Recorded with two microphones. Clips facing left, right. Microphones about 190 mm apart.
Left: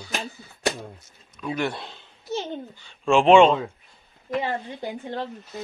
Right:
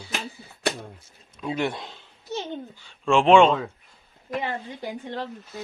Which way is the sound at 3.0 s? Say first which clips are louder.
Left 1 dB; centre (ahead or behind).